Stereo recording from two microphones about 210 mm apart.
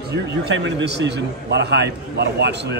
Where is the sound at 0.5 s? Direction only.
55° right (ahead or behind).